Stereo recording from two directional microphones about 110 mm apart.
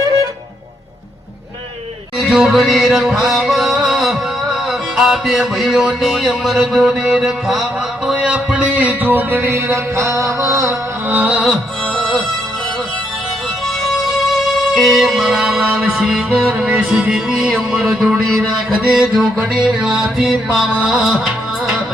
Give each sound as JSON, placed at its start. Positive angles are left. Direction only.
{"t": 2.1, "sound": "music", "side_deg": -5}
{"t": 11.2, "sound": "music", "side_deg": -10}
{"t": 14.7, "sound": "music", "side_deg": 0}